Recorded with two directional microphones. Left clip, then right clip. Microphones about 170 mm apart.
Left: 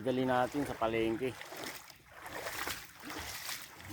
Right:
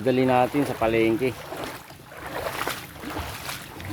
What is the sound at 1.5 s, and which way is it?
Boat, 70° left (ahead or behind).